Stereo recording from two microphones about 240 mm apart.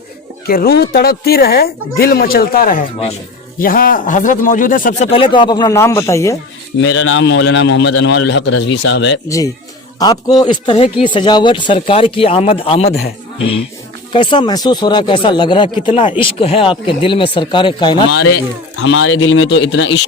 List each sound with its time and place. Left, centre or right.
0.4 s speech: left
5.1 s speech: left
6.8 s a man's voice: left
10.0 s speech: centre
18.3 s a man's voice: left